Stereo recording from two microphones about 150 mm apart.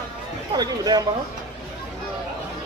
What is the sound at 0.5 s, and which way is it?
Speech, 25° right (ahead or behind).